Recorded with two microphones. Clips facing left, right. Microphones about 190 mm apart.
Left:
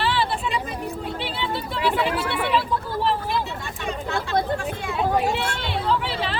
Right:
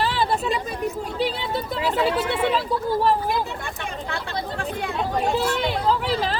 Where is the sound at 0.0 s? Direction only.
40° right (ahead or behind).